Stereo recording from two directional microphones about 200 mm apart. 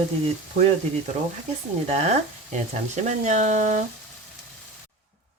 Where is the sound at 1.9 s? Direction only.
35° right (ahead or behind).